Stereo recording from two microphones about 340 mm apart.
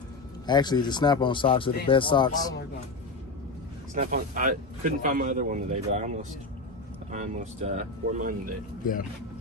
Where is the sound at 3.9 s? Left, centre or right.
Right.